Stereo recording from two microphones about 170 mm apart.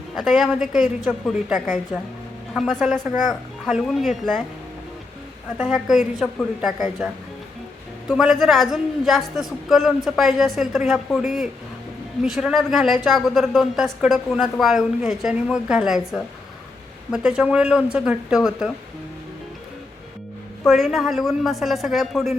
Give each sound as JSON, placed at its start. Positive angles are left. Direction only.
{"t": 0.2, "sound": "a man's voice", "side_deg": 0}
{"t": 5.5, "sound": "a man's voice", "side_deg": 0}
{"t": 8.1, "sound": "a man's voice", "side_deg": 0}
{"t": 20.7, "sound": "a man's voice", "side_deg": 0}